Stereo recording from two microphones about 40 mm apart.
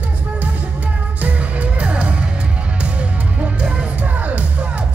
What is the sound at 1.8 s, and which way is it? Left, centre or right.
Music, right.